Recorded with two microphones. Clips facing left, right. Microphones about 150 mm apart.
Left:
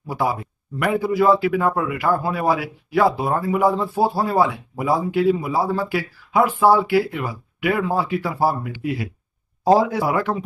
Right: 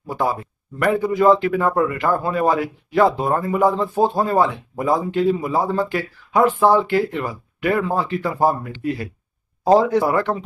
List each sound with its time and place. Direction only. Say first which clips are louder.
0.1 s speech: right 1 dB; 10° left (ahead or behind)